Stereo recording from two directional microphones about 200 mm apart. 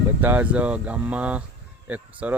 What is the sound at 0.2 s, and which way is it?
Speech, 10° right (ahead or behind).